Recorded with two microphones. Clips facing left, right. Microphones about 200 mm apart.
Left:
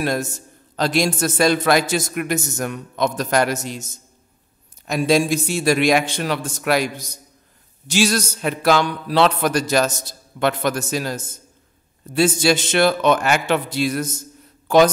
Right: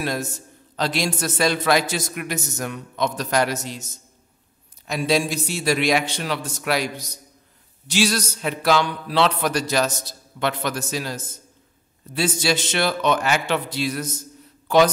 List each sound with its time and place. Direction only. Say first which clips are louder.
0.0 s a man's voice: left 4 dB; 50° left (ahead or behind)
4.8 s a man's voice: left 4 dB; 45° left (ahead or behind)